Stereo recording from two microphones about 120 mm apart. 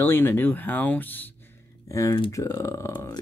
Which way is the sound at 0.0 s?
15° left (ahead or behind).